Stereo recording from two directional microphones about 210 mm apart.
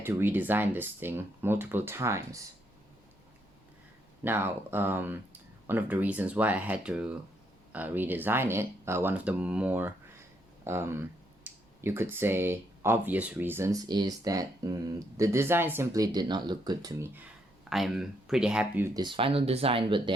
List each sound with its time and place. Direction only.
0.0 s speech: 10° right (ahead or behind)
4.2 s speech: 10° right (ahead or behind)
17.7 s speech: centre (ahead or behind)
18.9 s speech: 25° right (ahead or behind)